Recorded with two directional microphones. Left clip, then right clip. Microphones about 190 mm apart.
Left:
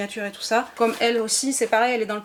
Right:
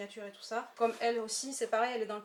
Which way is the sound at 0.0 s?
10° left (ahead or behind).